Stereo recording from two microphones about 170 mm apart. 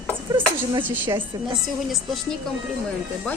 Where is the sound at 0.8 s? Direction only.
10° right (ahead or behind).